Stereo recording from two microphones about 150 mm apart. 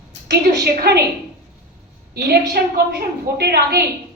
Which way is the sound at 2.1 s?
90° right.